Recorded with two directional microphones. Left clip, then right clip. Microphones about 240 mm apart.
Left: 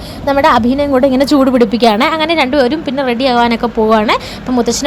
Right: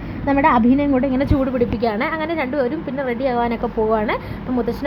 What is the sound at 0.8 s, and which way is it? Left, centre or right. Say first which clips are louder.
A woman's voice: left 8 dB; left.